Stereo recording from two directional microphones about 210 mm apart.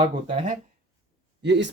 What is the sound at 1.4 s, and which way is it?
Speech, 55° right (ahead or behind).